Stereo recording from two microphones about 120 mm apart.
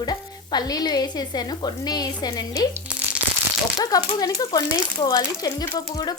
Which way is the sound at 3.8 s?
30° left (ahead or behind).